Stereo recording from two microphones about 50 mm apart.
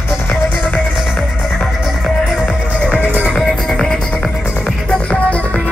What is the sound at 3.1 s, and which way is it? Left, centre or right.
Music, right.